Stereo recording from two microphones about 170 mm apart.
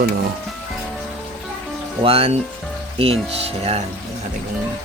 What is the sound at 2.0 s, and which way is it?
Speech, 35° right (ahead or behind).